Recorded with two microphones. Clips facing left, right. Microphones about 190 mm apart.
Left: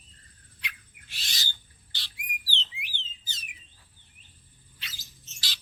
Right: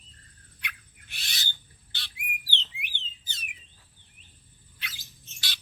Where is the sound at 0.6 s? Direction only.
60° right (ahead or behind).